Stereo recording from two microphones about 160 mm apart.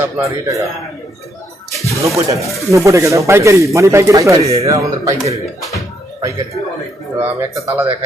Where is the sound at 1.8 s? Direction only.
20° right (ahead or behind).